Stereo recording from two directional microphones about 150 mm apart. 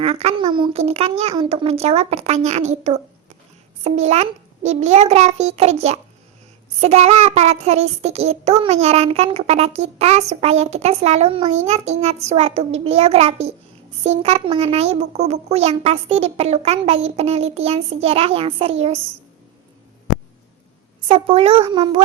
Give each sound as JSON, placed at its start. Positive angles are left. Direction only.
{"t": 0.0, "sound": "child singing", "side_deg": -45}
{"t": 0.4, "sound": "a child's voice", "side_deg": -30}
{"t": 0.7, "sound": "child singing", "side_deg": -45}
{"t": 21.1, "sound": "a child's voice", "side_deg": -40}